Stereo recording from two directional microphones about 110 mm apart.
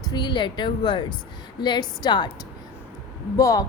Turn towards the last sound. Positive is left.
turn(degrees=30)  # may be behind; listen again after turning